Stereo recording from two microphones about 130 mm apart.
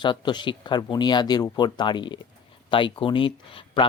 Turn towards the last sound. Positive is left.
turn(degrees=40)  # may be behind; listen again after turning